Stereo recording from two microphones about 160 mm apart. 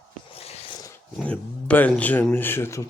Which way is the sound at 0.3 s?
40° left (ahead or behind).